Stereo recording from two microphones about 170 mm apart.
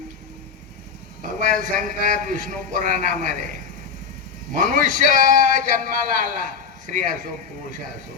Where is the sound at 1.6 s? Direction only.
50° right (ahead or behind).